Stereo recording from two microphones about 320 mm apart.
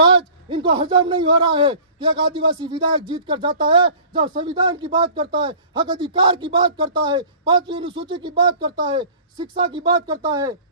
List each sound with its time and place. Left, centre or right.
0.0 s a man's voice: centre